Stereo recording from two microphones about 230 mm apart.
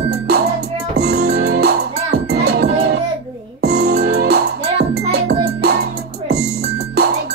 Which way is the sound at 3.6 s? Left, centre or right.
Right.